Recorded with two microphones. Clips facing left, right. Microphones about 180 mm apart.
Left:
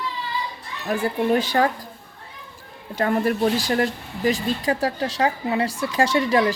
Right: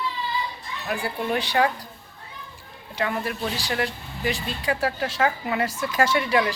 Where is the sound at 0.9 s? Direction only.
40° left (ahead or behind).